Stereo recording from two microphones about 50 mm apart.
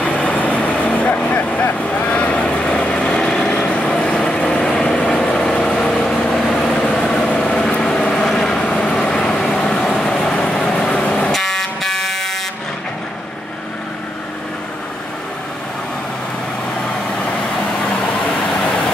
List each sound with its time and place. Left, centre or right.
0.0 s vehicle: left
6.8 s vehicle: left
8.3 s vehicle: centre
11.3 s fire alarm: centre